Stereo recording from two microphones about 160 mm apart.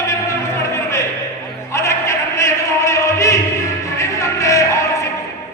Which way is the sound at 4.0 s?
20° left (ahead or behind).